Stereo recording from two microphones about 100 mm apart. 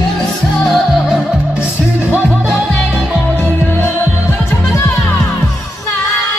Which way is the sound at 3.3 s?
15° left (ahead or behind).